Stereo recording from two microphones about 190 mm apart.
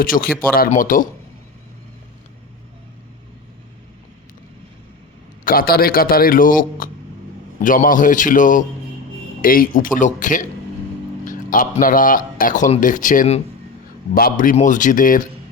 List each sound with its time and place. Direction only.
0.0 s a man's voice: 50° left (ahead or behind)
5.5 s a man's voice: 50° left (ahead or behind)